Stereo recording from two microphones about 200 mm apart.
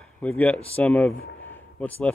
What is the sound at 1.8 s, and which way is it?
Speech, 5° left (ahead or behind).